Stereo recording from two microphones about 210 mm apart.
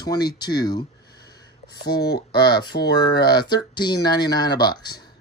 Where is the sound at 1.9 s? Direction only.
50° left (ahead or behind).